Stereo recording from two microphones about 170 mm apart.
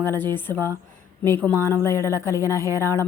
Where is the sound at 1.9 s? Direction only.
20° right (ahead or behind).